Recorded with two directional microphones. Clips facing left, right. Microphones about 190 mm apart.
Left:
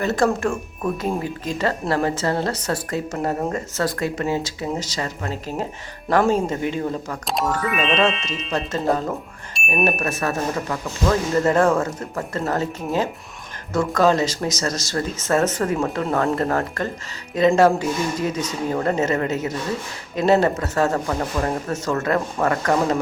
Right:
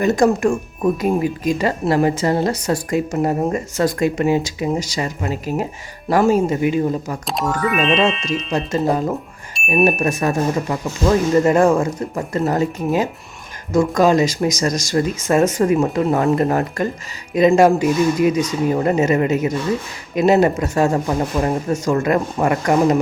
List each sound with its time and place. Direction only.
0.0 s speech: 15° right (ahead or behind); by 7.9 s centre (ahead or behind)
7.9 s speech: 10° right (ahead or behind)